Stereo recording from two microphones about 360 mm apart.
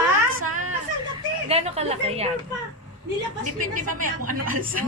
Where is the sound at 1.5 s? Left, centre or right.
Centre.